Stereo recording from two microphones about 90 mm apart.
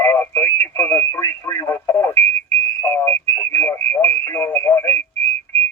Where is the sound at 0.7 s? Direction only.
25° left (ahead or behind).